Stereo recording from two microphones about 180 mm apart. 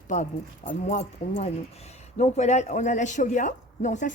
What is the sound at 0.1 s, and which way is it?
Speech, 40° left (ahead or behind).